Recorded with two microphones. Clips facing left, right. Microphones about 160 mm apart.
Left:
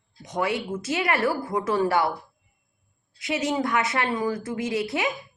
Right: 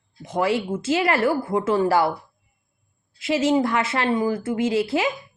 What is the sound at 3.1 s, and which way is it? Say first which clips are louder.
Speech: right 6 dB; 25° right (ahead or behind).